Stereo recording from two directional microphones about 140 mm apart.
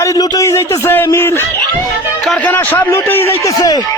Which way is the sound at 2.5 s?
15° left (ahead or behind).